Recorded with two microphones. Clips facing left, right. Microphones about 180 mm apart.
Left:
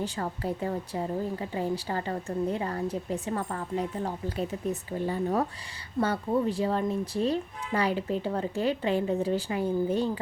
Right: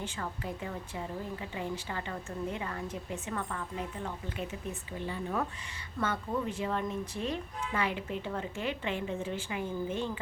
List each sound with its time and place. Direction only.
0.0 s a woman's voice: 35° left (ahead or behind)